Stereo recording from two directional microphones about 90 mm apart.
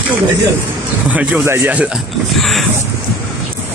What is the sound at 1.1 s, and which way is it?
Speech, 15° right (ahead or behind).